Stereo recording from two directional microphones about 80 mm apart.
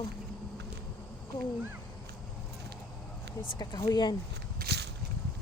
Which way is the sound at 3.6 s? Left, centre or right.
Left.